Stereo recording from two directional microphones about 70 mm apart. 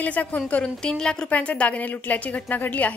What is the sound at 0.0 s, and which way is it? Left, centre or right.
A woman's voice, left.